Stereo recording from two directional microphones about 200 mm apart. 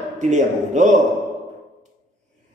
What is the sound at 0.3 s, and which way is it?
Speech, 40° right (ahead or behind).